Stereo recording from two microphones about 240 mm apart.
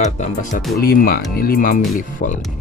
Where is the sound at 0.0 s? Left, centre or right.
Left.